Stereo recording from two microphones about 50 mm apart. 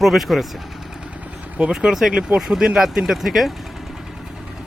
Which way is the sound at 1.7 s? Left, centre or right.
Centre.